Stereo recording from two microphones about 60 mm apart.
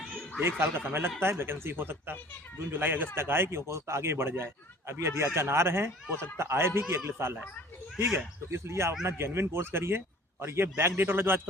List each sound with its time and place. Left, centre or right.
0.4 s a man's voice: right
8.4 s a man's voice: right